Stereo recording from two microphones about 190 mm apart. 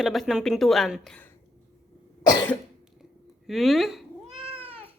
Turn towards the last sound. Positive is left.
turn(degrees=-30)  # may be behind; listen again after turning